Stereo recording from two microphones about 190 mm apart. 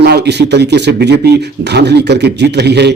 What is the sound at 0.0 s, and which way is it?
Speech, 60° right (ahead or behind).